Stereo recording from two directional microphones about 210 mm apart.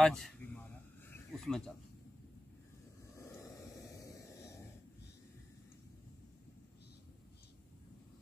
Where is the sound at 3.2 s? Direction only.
15° left (ahead or behind).